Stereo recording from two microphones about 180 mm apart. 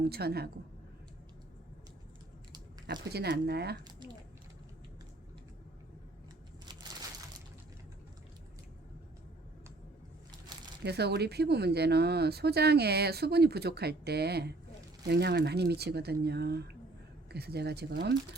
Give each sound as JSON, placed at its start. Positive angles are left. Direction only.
{"t": 0.0, "sound": "speech", "side_deg": -60}
{"t": 2.9, "sound": "speech", "side_deg": -65}
{"t": 3.8, "sound": "squish", "side_deg": -25}
{"t": 10.8, "sound": "speech", "side_deg": -65}